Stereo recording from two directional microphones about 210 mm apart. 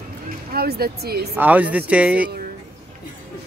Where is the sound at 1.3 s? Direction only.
5° right (ahead or behind).